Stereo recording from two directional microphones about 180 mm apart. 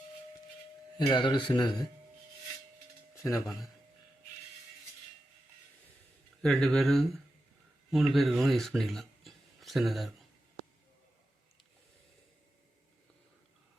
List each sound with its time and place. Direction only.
0.9 s speech: 25° left (ahead or behind)
3.2 s speech: 15° left (ahead or behind)
6.4 s speech: 5° left (ahead or behind)